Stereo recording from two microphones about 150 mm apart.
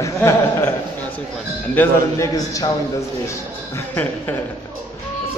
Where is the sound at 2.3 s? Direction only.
25° left (ahead or behind).